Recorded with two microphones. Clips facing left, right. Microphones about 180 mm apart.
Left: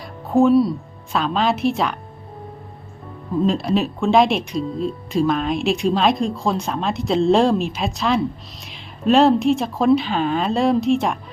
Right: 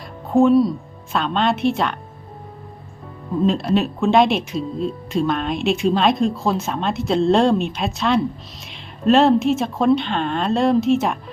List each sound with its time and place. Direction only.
0.3 s speech: centre (ahead or behind)
3.4 s speech: centre (ahead or behind)